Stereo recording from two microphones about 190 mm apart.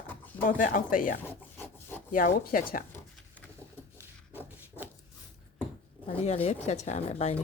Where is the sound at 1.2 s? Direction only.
10° left (ahead or behind).